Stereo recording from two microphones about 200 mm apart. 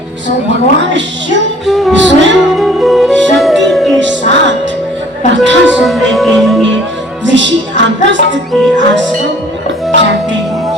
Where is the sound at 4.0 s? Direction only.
65° right (ahead or behind).